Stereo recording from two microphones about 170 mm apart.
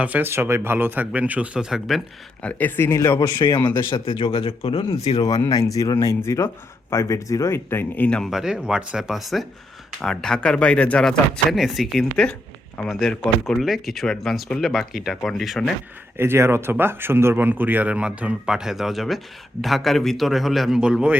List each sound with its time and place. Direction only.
0.0 s speech: 10° right (ahead or behind)
2.4 s speech: 10° left (ahead or behind); by 3.6 s 25° left (ahead or behind)
3.6 s speech: 10° left (ahead or behind)
3.8 s speech: 30° left (ahead or behind)
5.2 s speech: 20° left (ahead or behind); by 15.7 s centre (ahead or behind)
16.1 s speech: 15° right (ahead or behind)